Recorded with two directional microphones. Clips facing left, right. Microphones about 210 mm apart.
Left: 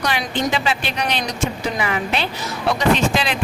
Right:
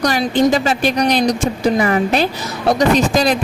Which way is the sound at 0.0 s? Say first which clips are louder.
Right 8 dB; 40° right (ahead or behind).